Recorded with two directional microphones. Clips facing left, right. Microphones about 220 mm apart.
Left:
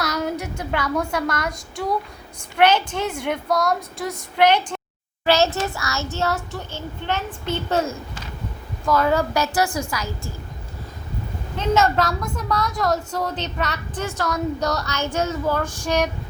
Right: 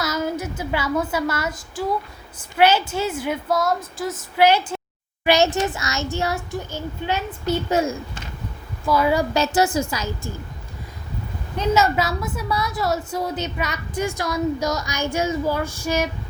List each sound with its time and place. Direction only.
0.0 s a woman's voice: centre (ahead or behind)
8.9 s a woman's voice: 10° right (ahead or behind)
9.3 s a woman's voice: 25° right (ahead or behind)
11.5 s a woman's voice: 5° right (ahead or behind)